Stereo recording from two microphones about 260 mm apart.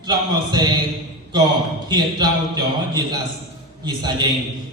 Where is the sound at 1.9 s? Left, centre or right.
Centre.